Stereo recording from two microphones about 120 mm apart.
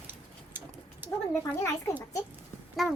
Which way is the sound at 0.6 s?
15° right (ahead or behind).